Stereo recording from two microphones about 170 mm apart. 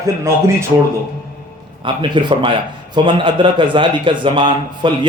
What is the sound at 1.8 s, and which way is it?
A man's voice, 30° right (ahead or behind).